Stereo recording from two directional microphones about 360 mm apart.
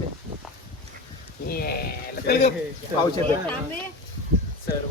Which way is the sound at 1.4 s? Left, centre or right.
Left.